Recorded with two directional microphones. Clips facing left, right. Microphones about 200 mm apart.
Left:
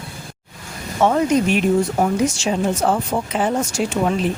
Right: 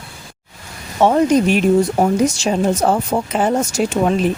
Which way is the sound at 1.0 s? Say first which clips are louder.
Right 3 dB; 30° right (ahead or behind).